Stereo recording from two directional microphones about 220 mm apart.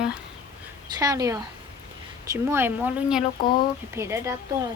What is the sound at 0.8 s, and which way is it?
A woman's voice, 15° right (ahead or behind).